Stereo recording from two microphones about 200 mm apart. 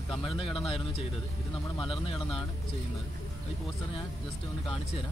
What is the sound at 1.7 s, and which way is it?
Speech, 25° left (ahead or behind).